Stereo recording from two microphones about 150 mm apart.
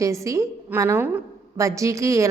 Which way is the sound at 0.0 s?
20° right (ahead or behind).